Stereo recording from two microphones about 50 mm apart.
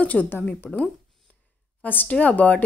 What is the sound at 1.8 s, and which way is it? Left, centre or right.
Speech, left.